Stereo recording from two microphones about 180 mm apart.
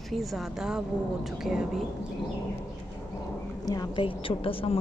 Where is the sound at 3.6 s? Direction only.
25° left (ahead or behind).